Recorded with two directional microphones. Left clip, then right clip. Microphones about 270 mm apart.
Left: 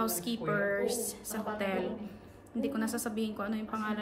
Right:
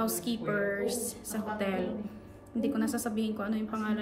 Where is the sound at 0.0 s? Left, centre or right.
Centre.